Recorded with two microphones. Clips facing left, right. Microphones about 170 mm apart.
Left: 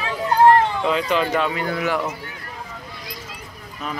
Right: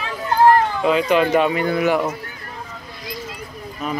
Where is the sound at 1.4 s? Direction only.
20° right (ahead or behind).